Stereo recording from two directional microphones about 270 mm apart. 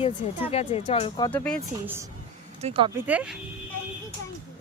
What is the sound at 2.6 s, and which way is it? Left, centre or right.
Speech, right.